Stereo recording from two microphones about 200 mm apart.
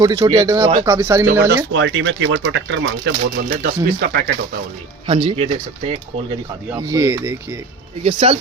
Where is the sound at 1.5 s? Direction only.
70° right (ahead or behind); by 4.3 s 55° right (ahead or behind).